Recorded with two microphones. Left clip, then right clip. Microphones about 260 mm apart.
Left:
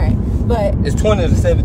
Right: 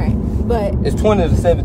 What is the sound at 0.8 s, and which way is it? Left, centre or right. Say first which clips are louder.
Speech: right 1 dB; right.